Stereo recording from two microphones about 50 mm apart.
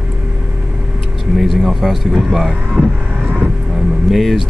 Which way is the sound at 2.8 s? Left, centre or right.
Right.